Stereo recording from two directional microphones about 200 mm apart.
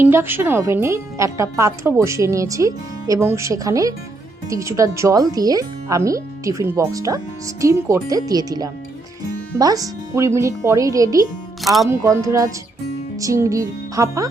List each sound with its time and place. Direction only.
0.0 s speech: 10° right (ahead or behind)
11.6 s speech: centre (ahead or behind)
11.9 s speech: 15° right (ahead or behind)